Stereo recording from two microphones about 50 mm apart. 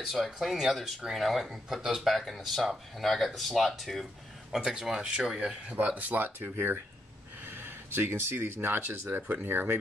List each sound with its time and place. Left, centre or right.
0.1 s speech: centre
1.8 s speech: centre
2.0 s speech: centre
4.5 s speech: centre
5.9 s speech: right
7.4 s a sound: right
8.4 s speech: right